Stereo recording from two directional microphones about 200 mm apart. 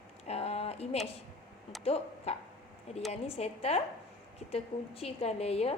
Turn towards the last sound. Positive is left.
turn(degrees=30)  # may be behind; listen again after turning